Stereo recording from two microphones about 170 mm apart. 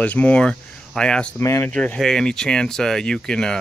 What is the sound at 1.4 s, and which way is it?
Speech, 15° left (ahead or behind).